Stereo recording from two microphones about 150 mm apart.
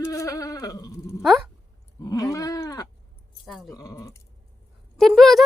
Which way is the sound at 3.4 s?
Centre (ahead or behind).